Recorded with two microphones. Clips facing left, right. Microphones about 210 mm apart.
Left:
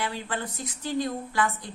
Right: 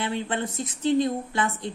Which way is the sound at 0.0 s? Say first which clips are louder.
Right 4 dB; 25° right (ahead or behind).